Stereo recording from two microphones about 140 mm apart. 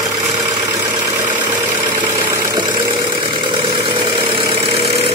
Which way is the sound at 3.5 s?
35° right (ahead or behind).